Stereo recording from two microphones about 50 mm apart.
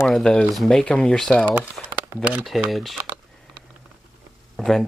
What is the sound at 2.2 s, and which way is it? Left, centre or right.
Speech, right.